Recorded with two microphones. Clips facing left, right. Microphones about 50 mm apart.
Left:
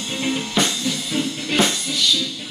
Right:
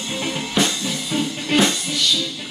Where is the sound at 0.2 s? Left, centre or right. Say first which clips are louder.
Even; centre.